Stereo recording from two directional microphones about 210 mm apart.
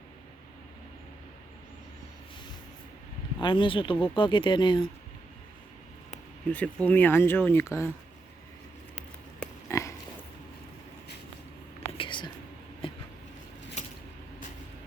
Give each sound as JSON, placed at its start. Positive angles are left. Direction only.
{"t": 3.3, "sound": "speech", "side_deg": 20}
{"t": 6.5, "sound": "speech", "side_deg": 5}
{"t": 9.0, "sound": "pig", "side_deg": 10}
{"t": 11.9, "sound": "whispering", "side_deg": 25}
{"t": 12.8, "sound": "a sound", "side_deg": 25}